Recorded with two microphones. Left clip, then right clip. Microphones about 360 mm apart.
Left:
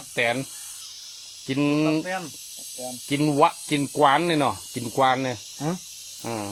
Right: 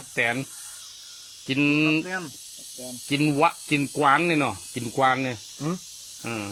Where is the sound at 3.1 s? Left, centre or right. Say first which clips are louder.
Left 1 dB; centre.